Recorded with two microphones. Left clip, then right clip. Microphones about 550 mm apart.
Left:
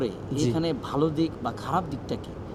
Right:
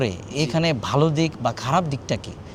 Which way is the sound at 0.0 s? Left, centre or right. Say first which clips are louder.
Right 3 dB; right.